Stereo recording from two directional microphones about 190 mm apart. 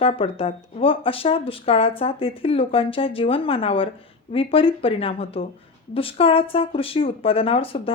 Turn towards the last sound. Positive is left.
turn(degrees=30)  # may be behind; listen again after turning